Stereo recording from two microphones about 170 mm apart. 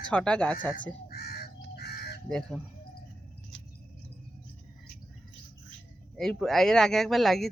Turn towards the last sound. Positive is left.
turn(degrees=0)  # may be behind; listen again after turning